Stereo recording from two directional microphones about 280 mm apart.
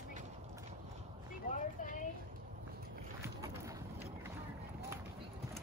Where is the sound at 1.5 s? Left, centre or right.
Left.